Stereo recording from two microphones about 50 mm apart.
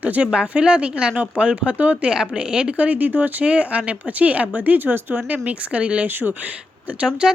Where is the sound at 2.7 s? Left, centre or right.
Right.